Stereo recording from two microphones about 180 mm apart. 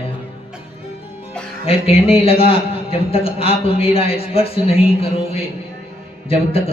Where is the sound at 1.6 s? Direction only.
30° left (ahead or behind).